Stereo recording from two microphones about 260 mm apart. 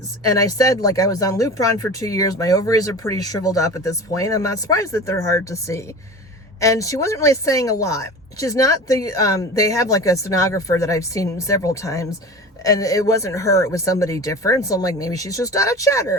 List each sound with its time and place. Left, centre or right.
0.3 s speech: centre